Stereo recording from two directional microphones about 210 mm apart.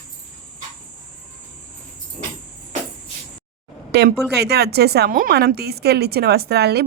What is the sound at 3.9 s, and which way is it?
A woman's voice, 50° right (ahead or behind).